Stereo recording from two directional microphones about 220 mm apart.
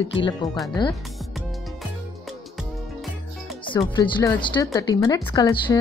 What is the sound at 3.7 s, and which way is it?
Speech, 20° left (ahead or behind).